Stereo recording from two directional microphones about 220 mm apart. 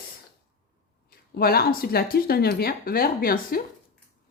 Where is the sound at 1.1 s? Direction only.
45° left (ahead or behind).